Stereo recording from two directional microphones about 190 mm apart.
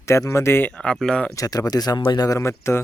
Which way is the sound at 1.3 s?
20° left (ahead or behind).